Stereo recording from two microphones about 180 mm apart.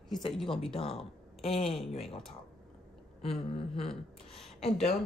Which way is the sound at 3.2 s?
30° left (ahead or behind).